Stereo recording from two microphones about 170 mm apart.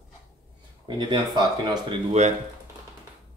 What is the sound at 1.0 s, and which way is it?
Speech, 25° right (ahead or behind).